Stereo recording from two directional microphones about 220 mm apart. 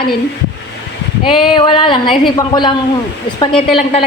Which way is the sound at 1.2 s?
25° left (ahead or behind).